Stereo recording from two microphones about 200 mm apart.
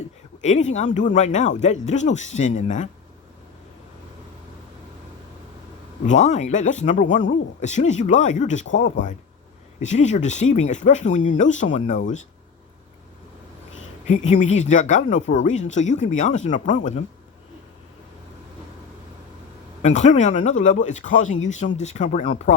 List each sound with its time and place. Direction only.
0.4 s speech: 35° left (ahead or behind)
6.1 s speech: 35° left (ahead or behind)
14.1 s speech: 35° left (ahead or behind)
19.8 s speech: 35° left (ahead or behind)